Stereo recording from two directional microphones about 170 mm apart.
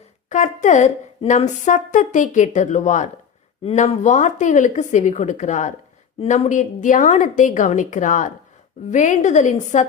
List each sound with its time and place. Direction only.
0.3 s a woman's voice: 45° left (ahead or behind)